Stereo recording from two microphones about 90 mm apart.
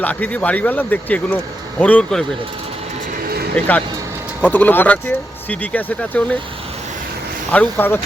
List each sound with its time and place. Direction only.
0.0 s speech: 15° left (ahead or behind)
3.5 s speech: 15° left (ahead or behind)
7.5 s speech: 20° left (ahead or behind)